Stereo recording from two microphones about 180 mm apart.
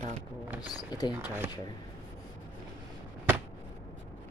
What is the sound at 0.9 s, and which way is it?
Speech, 25° left (ahead or behind).